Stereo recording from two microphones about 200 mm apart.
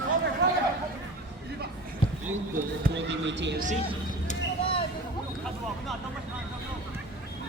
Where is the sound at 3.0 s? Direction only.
65° right (ahead or behind).